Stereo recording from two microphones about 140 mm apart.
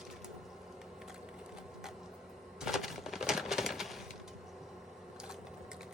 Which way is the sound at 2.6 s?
Centre (ahead or behind).